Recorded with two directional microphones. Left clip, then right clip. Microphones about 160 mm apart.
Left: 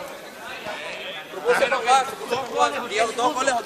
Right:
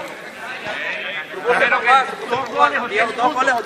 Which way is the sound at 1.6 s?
70° left (ahead or behind).